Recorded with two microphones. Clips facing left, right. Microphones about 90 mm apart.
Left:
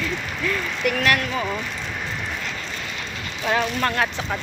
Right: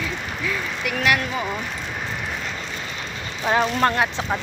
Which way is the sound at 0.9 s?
15° right (ahead or behind).